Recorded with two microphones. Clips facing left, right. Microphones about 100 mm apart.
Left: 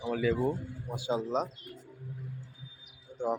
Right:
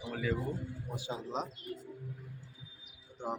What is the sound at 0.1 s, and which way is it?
Speech, 90° left.